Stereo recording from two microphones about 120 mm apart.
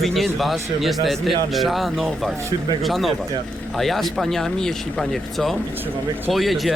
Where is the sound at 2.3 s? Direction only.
25° right (ahead or behind).